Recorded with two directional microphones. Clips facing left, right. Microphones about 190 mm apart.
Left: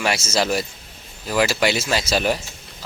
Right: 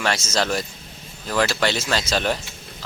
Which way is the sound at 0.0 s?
10° left (ahead or behind).